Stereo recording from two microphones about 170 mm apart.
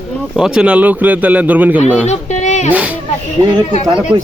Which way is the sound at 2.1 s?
40° left (ahead or behind).